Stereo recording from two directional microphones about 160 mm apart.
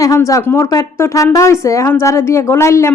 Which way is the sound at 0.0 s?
20° left (ahead or behind).